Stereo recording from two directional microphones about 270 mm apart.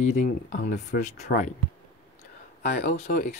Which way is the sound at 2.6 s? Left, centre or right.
Left.